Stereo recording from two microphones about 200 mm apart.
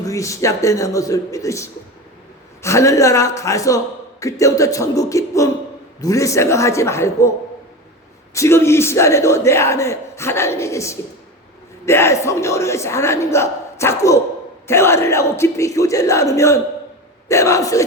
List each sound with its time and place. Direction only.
0.0 s speech: 15° left (ahead or behind)